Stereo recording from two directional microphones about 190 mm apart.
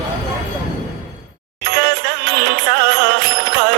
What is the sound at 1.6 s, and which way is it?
Music, 55° right (ahead or behind).